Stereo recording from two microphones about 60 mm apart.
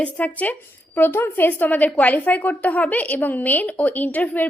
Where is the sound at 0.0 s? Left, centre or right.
Left.